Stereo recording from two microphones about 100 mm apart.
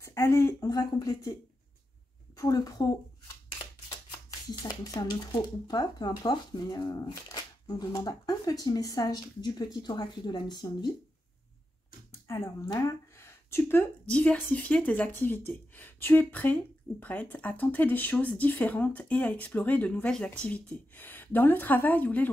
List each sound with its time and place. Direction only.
0.0 s a woman's voice: 30° left (ahead or behind)
2.3 s speech: 35° left (ahead or behind)
4.5 s speech: 45° left (ahead or behind)
12.1 s a sound: 30° left (ahead or behind)
14.1 s speech: 15° left (ahead or behind)